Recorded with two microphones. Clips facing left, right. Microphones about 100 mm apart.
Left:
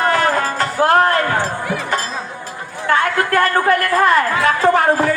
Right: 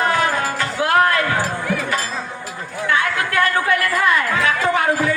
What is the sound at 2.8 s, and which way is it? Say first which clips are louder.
Chatter: left 4 dB; 40° left (ahead or behind).